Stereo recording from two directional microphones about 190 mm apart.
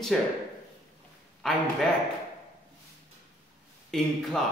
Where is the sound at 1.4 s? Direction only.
5° left (ahead or behind).